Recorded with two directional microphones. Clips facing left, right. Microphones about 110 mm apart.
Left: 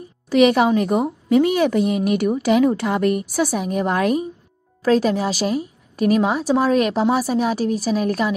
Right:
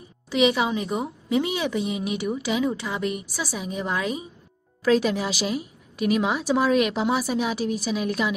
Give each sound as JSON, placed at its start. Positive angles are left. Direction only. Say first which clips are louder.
{"t": 0.3, "sound": "a woman's voice", "louder": "left 7 dB", "side_deg": 50}
{"t": 4.8, "sound": "a woman's voice", "louder": "left 4 dB", "side_deg": 35}